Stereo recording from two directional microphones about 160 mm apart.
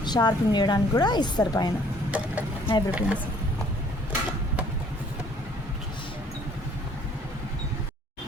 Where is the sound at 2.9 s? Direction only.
10° right (ahead or behind).